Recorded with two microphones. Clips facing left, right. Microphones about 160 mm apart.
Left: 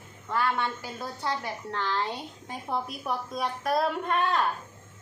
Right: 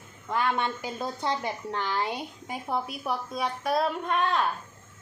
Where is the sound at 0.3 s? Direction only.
20° right (ahead or behind); by 4.4 s centre (ahead or behind).